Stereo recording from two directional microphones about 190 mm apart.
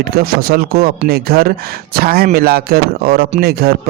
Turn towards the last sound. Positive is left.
turn(degrees=-55)  # may be behind; listen again after turning